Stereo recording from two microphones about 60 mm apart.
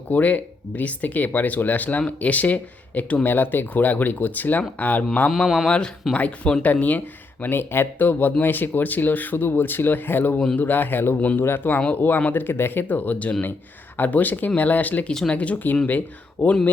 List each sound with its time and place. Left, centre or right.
0.1 s speech: left
5.6 s speech: centre
7.4 s speech: left
11.2 s speech: left
11.4 s speech: left